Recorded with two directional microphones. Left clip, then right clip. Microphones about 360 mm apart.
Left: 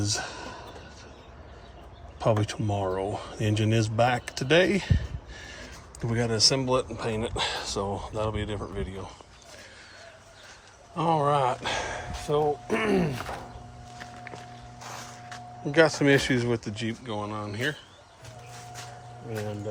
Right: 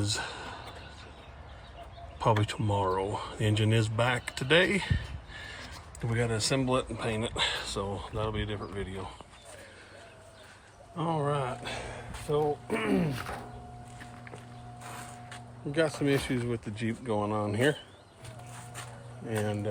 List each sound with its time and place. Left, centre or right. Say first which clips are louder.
0.0 s a sound: left 3 dB; centre
2.1 s speech: left 2 dB; centre
10.9 s speech: left 7 dB; centre; by 13.1 s left
15.7 s speech: left 7 dB; left
16.7 s speech: right 1 dB; centre